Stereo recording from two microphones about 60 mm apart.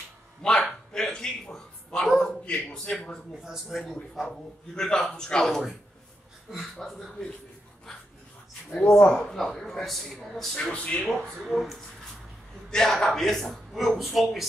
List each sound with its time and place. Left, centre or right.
0.4 s a man's voice: centre
0.9 s a sound: centre
2.1 s a man's voice: centre
3.4 s a man's voice: centre
6.8 s a man's voice: centre
8.8 s speech: left
9.1 s a man's voice: centre
10.6 s speech: centre
11.1 s a man's voice: centre